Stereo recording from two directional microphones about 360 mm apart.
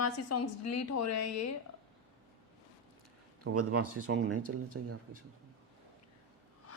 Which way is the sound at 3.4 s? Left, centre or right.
Right.